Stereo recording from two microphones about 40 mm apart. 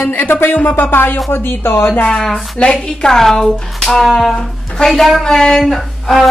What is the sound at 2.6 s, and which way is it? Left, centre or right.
Speech, left.